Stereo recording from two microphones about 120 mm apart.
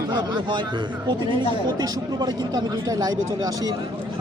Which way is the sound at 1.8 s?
35° right (ahead or behind).